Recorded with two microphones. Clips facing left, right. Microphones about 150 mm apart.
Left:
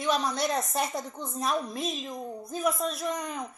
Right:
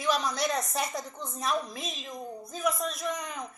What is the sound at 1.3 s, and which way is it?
A woman's voice, centre (ahead or behind).